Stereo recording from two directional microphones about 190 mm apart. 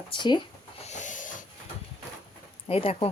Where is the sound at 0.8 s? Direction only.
40° left (ahead or behind).